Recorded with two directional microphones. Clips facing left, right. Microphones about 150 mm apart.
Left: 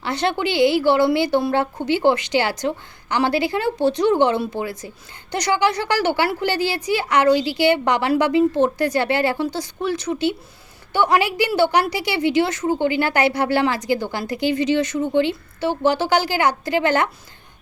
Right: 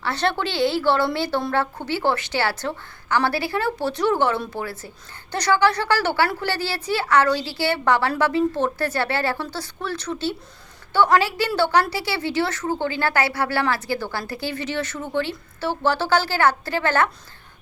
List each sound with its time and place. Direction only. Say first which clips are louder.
0.0 s a woman's voice: left 2 dB; 15° left (ahead or behind)